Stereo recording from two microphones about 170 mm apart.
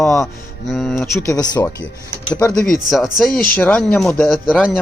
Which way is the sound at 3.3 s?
55° left (ahead or behind).